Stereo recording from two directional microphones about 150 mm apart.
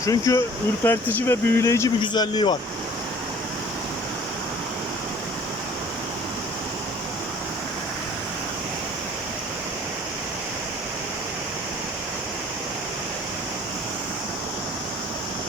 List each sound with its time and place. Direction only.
0.0 s a man's voice: 20° left (ahead or behind)